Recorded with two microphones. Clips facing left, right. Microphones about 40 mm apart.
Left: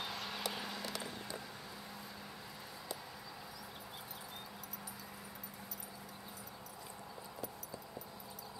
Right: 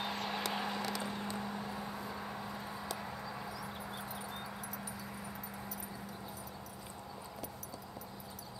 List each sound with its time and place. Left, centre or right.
0.0 s vehicle: centre